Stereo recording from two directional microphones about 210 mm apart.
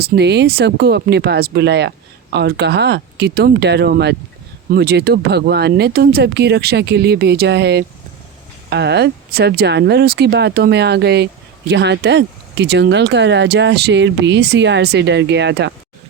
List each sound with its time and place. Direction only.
0.0 s speech: 55° right (ahead or behind)